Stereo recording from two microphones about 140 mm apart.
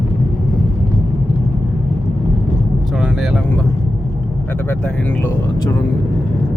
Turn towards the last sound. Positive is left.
turn(degrees=15)  # may be behind; listen again after turning